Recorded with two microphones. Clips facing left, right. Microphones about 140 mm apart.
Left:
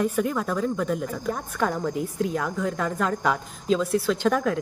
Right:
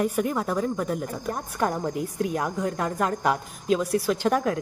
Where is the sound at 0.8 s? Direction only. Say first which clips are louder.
Left 2 dB; 40° right (ahead or behind).